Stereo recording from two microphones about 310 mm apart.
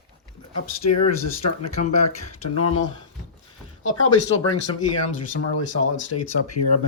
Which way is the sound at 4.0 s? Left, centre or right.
Left.